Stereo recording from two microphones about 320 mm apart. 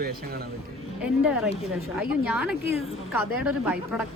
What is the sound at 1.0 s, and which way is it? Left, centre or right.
Speech, centre.